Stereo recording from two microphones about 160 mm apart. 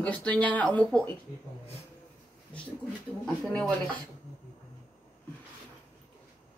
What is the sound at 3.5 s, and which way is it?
Speech, 5° left (ahead or behind).